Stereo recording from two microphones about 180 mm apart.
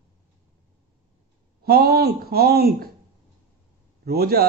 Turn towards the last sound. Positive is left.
turn(degrees=-60)  # may be behind; listen again after turning